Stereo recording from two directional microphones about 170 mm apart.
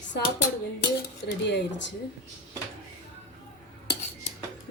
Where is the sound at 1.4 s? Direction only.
90° left.